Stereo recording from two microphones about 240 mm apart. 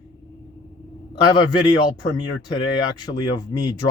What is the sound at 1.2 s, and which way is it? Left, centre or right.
Speech, centre.